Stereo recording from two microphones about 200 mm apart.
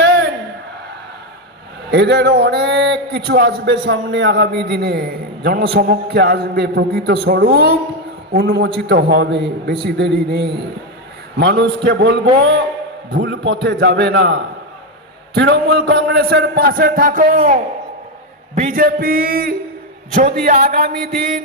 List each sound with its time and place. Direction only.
1.9 s a man's voice: 55° right (ahead or behind)
15.4 s a man's voice: 55° right (ahead or behind)